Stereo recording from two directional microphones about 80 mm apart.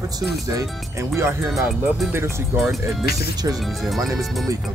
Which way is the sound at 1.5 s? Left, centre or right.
Centre.